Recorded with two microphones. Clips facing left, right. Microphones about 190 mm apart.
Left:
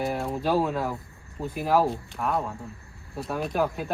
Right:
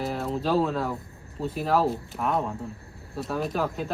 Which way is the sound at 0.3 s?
10° left (ahead or behind).